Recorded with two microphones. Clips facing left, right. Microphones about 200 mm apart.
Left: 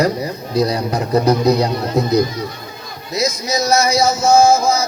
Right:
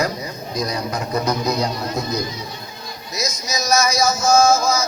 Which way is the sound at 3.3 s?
60° left (ahead or behind).